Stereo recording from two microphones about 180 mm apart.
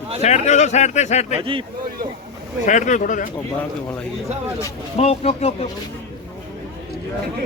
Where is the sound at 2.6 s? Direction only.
45° left (ahead or behind).